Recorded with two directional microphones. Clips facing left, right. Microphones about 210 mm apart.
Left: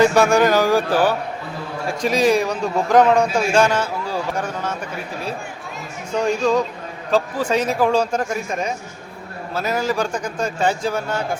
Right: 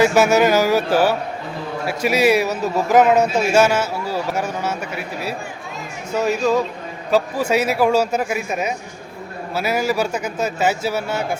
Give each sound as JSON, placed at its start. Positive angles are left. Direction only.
{"t": 0.0, "sound": "a man's voice", "side_deg": -5}